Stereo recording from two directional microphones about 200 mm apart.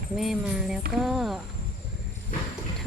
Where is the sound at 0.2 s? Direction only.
Centre (ahead or behind).